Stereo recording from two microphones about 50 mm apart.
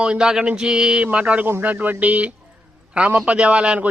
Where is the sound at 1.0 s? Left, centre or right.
Right.